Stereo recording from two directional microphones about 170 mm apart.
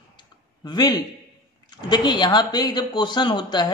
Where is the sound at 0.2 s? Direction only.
25° left (ahead or behind).